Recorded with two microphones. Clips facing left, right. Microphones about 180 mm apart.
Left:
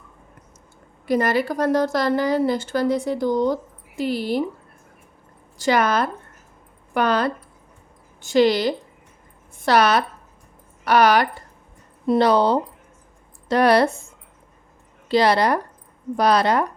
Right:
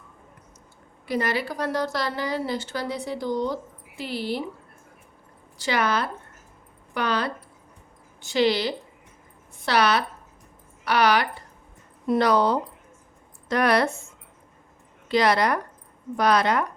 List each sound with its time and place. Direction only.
1.0 s a woman's voice: 45° left (ahead or behind)
5.5 s a woman's voice: 45° left (ahead or behind)
12.0 s speech: 30° left (ahead or behind)
15.1 s speech: 30° left (ahead or behind)